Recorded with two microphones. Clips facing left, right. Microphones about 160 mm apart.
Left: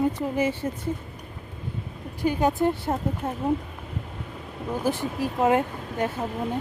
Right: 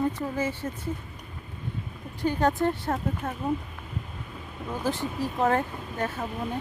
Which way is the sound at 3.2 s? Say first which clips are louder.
Left 3 dB; 25° left (ahead or behind).